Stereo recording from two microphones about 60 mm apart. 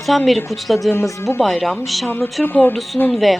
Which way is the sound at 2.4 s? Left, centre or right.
Left.